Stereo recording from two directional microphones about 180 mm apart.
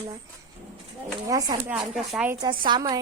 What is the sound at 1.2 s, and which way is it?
Speech, 20° right (ahead or behind).